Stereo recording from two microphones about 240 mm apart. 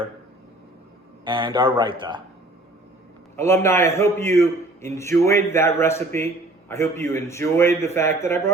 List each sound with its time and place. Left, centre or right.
1.2 s a man's voice: centre
3.3 s a man's voice: centre